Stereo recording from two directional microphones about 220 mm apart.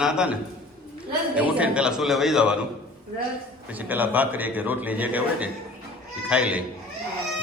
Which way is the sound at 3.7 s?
10° right (ahead or behind).